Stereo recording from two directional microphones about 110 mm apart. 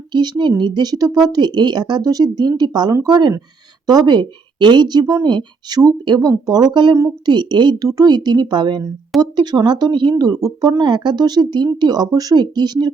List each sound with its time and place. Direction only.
0.1 s speech: 40° right (ahead or behind)